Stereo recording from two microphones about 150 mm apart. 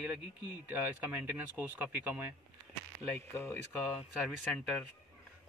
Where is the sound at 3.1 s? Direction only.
15° left (ahead or behind).